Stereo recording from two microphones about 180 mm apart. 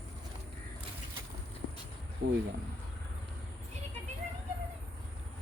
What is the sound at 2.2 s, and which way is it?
Speech, 70° right (ahead or behind).